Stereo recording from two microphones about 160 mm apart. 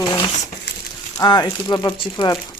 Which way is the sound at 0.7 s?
90° left.